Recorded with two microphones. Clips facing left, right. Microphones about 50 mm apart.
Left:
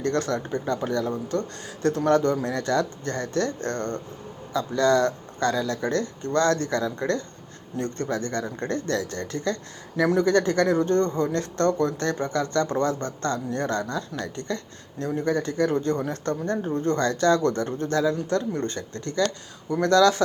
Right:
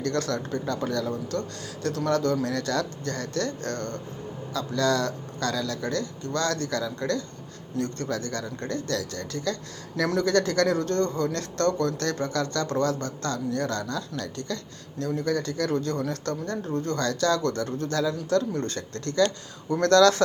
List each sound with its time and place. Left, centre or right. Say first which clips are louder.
0.0 s speech: left 2 dB; left
10.0 s speech: left 3 dB; centre